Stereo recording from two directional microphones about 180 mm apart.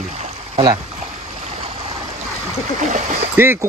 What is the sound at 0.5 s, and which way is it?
Speech, 25° right (ahead or behind).